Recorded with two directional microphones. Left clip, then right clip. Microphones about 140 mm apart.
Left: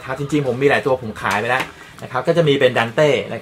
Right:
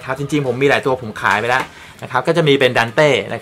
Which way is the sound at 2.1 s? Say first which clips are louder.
Right 2 dB; 45° right (ahead or behind).